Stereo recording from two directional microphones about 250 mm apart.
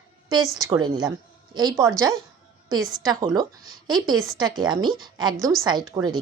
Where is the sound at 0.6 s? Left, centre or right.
Centre.